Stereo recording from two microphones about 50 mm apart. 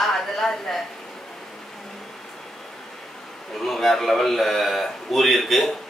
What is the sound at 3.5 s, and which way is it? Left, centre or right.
A woman's voice, centre.